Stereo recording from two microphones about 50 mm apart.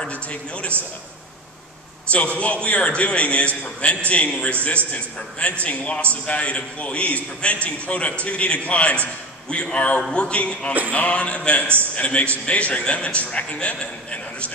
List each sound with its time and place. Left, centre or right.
0.1 s a man's voice: left
2.0 s a man's voice: left